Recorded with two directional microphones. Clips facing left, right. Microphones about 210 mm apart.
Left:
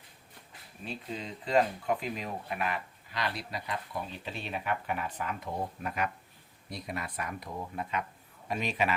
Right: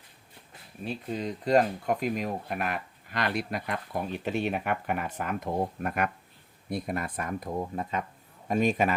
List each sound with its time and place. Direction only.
1.1 s speech: 45° right (ahead or behind)